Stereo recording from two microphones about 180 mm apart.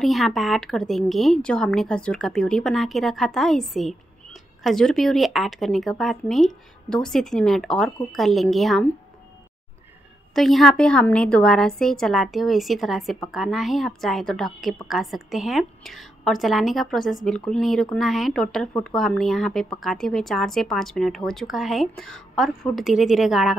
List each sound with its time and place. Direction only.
0.0 s a woman's voice: centre (ahead or behind)
10.3 s a woman's voice: centre (ahead or behind)